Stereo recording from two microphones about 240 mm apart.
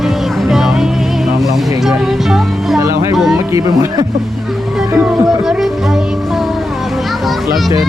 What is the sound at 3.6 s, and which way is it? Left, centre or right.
Speech, centre.